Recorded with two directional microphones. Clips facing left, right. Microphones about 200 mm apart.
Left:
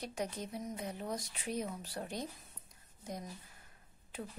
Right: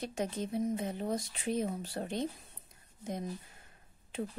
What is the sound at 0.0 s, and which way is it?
Speech, 25° right (ahead or behind).